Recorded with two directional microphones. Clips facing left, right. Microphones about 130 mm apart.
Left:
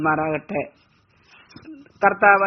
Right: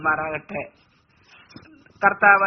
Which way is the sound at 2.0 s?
25° left (ahead or behind).